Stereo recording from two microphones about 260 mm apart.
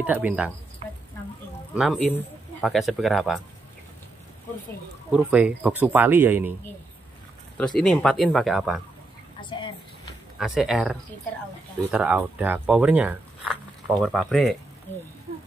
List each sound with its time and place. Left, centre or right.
0.0 s speech: centre
1.7 s speech: centre
5.1 s speech: centre
7.5 s speech: centre
9.4 s a woman's voice: centre
10.4 s speech: centre